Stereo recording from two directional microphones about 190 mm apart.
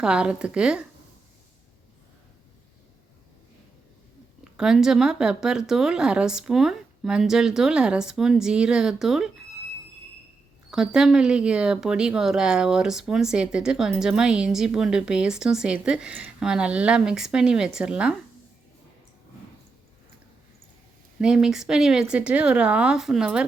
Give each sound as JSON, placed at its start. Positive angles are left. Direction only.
{"t": 0.0, "sound": "speech", "side_deg": -5}
{"t": 4.5, "sound": "speech", "side_deg": -5}
{"t": 10.7, "sound": "speech", "side_deg": -5}
{"t": 21.2, "sound": "speech", "side_deg": -5}